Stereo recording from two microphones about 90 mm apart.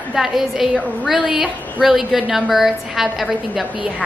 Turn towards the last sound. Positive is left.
turn(degrees=0)  # may be behind; listen again after turning